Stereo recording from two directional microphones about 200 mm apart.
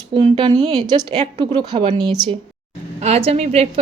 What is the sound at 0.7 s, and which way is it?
A woman's voice, 20° right (ahead or behind).